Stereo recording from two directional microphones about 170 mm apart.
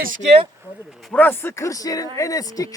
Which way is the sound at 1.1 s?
10° left (ahead or behind).